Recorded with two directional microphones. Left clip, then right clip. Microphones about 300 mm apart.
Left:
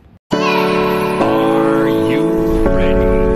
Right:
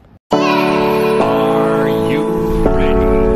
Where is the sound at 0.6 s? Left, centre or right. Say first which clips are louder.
Right 2 dB; left.